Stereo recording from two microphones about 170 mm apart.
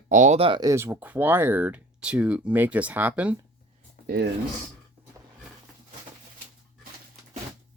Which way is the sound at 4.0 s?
45° left (ahead or behind).